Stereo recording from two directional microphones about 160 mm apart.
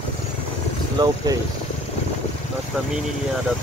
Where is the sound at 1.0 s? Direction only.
30° right (ahead or behind).